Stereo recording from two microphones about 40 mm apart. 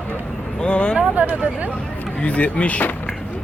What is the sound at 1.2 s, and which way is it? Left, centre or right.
Speech, right.